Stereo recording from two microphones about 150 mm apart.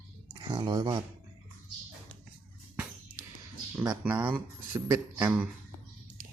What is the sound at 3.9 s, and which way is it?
Speech, 10° right (ahead or behind).